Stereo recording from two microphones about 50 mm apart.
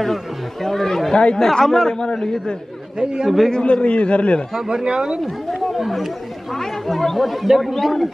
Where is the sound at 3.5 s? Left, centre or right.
Centre.